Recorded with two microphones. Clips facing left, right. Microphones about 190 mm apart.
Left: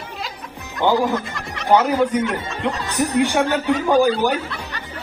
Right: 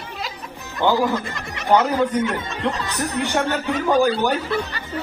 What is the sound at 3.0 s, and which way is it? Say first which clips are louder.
Speech: left 8 dB; 10° left (ahead or behind).